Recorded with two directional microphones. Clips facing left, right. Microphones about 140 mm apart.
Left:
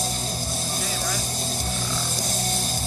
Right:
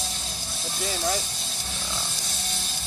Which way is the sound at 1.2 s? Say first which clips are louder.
Left 7 dB; 45° left (ahead or behind).